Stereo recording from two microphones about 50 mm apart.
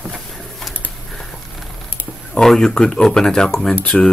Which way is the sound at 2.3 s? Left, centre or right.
Centre.